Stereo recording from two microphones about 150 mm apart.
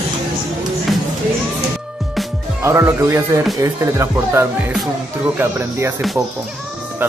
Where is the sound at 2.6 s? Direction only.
20° right (ahead or behind).